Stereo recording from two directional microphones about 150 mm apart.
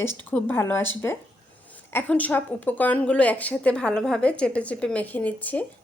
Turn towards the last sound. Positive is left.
turn(degrees=10)  # may be behind; listen again after turning